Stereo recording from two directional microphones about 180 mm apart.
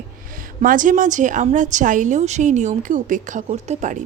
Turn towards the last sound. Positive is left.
turn(degrees=-40)  # may be behind; listen again after turning